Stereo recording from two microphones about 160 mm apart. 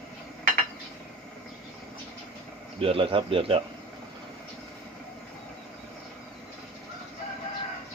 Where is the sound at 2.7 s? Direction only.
35° right (ahead or behind).